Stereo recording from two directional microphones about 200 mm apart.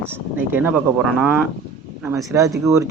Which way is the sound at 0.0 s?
10° right (ahead or behind).